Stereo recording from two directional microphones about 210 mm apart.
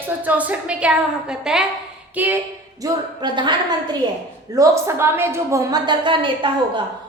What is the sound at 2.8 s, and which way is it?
A woman's voice, 20° right (ahead or behind).